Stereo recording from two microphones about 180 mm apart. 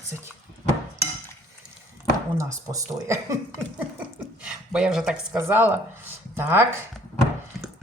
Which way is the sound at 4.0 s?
5° right (ahead or behind).